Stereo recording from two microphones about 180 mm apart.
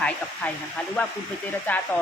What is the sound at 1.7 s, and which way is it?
Speech, 10° left (ahead or behind).